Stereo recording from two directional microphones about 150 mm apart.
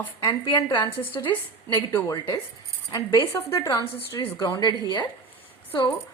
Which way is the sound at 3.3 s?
20° left (ahead or behind).